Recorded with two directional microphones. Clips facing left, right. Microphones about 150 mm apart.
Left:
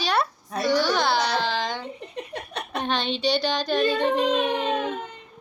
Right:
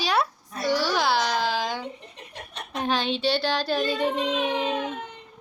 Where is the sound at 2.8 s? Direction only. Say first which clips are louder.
Right 1 dB; 5° right (ahead or behind).